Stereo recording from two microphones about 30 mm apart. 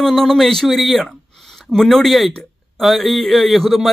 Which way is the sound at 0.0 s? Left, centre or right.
Centre.